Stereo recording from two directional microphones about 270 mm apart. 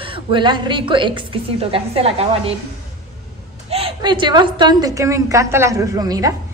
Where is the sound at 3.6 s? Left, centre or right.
Right.